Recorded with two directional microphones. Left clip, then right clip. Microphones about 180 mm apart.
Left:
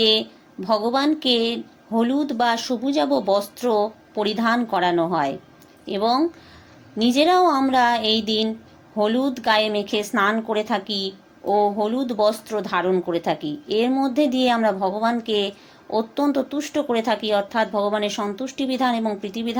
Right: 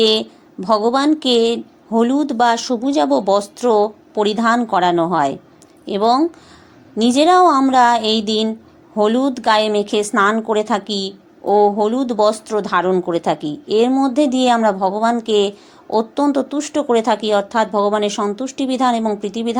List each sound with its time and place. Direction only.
0.0 s a woman's voice: 25° right (ahead or behind)